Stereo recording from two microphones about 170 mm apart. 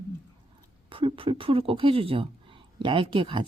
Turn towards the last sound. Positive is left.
turn(degrees=-30)  # may be behind; listen again after turning